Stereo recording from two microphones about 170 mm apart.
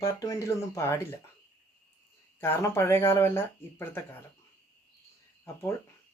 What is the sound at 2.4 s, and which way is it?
Speech, 15° left (ahead or behind).